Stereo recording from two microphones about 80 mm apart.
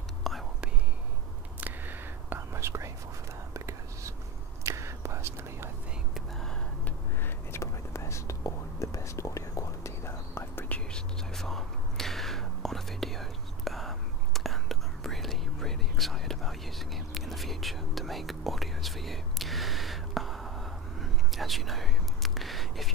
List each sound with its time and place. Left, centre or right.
0.2 s whispering: centre
1.6 s whispering: right
7.5 s whispering: left
10.9 s whispering: centre